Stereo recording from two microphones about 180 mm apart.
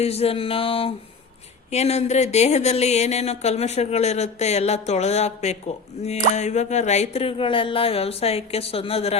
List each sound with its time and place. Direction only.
0.0 s speech: 35° left (ahead or behind)